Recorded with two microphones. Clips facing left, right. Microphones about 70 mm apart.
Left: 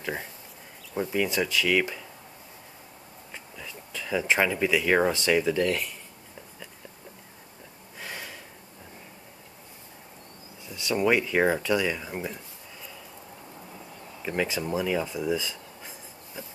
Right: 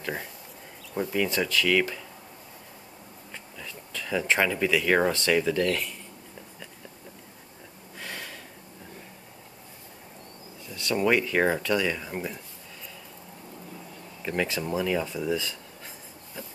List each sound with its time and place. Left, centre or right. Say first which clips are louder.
1.1 s speech: even; centre
3.5 s speech: even; centre
8.0 s a sound: even; centre
10.7 s speech: even; centre
14.2 s speech: even; centre
16.4 s a sound: even; centre